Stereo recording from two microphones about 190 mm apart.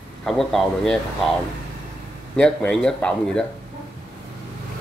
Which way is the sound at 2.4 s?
5° left (ahead or behind).